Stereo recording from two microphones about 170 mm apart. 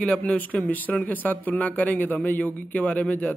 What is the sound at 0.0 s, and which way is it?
A man's voice, 10° left (ahead or behind).